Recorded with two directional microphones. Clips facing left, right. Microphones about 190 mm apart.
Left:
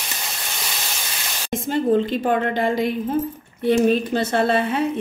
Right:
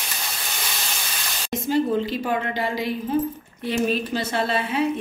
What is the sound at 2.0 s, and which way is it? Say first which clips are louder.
A woman's voice: left 4 dB; 55° left (ahead or behind).